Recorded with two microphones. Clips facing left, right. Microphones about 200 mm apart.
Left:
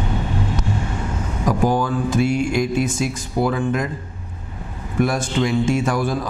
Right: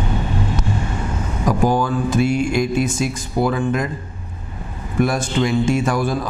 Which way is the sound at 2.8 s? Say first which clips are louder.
Right 1 dB; 10° right (ahead or behind).